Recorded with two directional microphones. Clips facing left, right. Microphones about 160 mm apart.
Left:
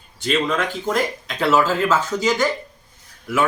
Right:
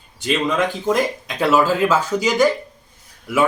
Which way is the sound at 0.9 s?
15° right (ahead or behind).